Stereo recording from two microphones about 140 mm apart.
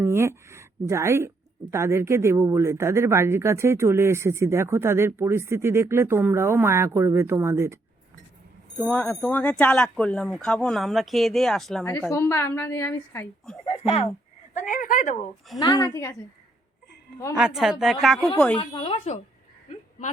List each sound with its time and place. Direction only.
0.0 s a sound: 20° right (ahead or behind)
1.7 s speech: 20° right (ahead or behind)
8.9 s speech: 10° left (ahead or behind)
11.9 s speech: 15° left (ahead or behind)
13.7 s speech: 45° left (ahead or behind)
14.5 s speech: 70° left (ahead or behind)
15.5 s a woman's voice: 30° left (ahead or behind)
17.3 s speech: 5° right (ahead or behind)
18.5 s speech: 40° left (ahead or behind)